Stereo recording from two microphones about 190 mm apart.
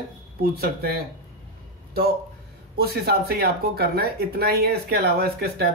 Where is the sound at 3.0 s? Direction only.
55° right (ahead or behind).